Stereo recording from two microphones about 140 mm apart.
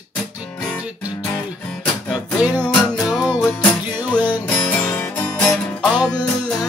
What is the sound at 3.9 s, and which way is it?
Music, 30° left (ahead or behind).